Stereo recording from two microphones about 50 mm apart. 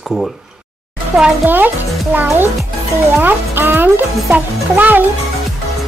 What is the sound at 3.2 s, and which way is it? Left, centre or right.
A child's voice, right.